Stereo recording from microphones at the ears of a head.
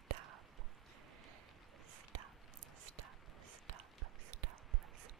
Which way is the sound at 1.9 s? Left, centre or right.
Right.